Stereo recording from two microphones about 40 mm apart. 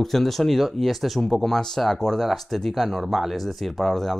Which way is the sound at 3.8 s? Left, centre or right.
Centre.